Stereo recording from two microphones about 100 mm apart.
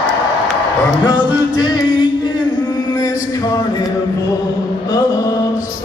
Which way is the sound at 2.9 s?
40° left (ahead or behind).